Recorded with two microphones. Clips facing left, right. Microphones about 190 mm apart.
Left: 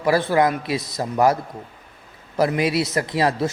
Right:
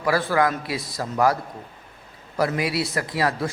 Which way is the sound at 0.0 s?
25° left (ahead or behind).